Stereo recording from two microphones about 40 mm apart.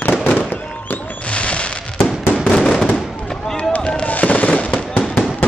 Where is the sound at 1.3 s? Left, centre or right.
Left.